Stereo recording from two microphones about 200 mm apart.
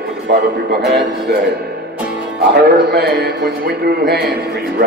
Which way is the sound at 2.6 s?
55° right (ahead or behind).